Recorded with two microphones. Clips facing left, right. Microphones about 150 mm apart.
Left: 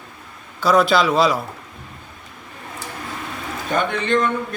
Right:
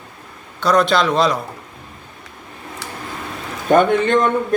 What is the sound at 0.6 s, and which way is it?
Speech, 5° left (ahead or behind).